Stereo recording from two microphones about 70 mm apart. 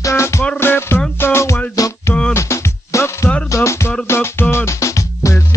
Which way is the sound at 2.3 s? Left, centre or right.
Left.